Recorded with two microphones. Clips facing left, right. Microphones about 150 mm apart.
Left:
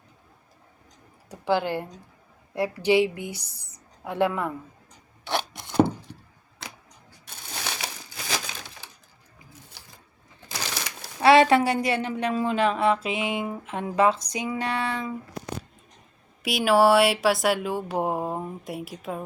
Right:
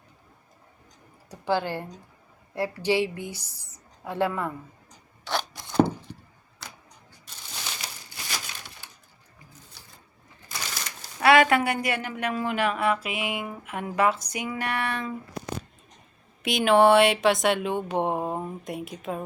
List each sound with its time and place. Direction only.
1.3 s speech: 15° left (ahead or behind)
5.2 s chopping: 20° left (ahead or behind)
7.3 s crushing: 70° left (ahead or behind)
10.5 s pigeon: 75° left (ahead or behind)
11.2 s a woman's voice: 30° left (ahead or behind)
16.4 s speech: 5° left (ahead or behind)